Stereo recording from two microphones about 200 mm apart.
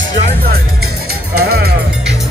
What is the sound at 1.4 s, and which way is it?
Music, 50° right (ahead or behind).